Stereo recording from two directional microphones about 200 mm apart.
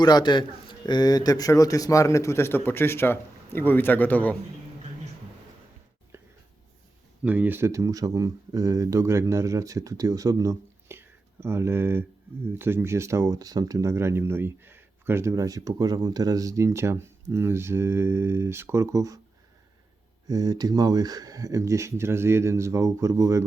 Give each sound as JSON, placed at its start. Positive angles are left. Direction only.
{"t": 0.0, "sound": "a man's voice", "side_deg": 20}
{"t": 7.3, "sound": "speech", "side_deg": -10}
{"t": 20.2, "sound": "speech", "side_deg": -20}